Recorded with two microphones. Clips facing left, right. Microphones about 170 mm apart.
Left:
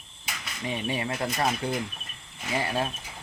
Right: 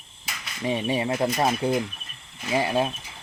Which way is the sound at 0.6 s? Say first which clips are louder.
Right 5 dB; 25° right (ahead or behind).